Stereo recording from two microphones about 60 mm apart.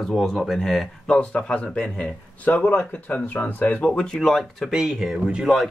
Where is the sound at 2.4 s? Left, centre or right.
Left.